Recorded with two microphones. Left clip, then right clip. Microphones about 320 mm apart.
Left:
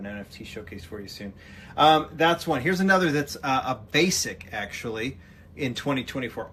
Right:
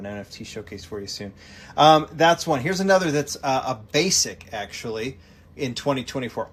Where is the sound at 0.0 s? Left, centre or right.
Centre.